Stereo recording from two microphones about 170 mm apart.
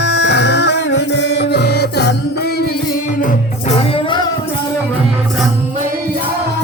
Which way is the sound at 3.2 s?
40° left (ahead or behind).